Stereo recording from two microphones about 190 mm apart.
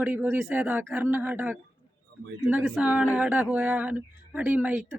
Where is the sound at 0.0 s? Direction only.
10° right (ahead or behind).